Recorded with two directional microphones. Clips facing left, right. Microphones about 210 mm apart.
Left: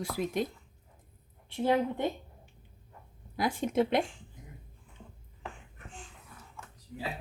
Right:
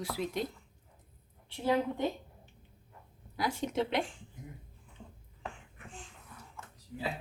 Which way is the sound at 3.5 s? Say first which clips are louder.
Left 6 dB; 50° left (ahead or behind).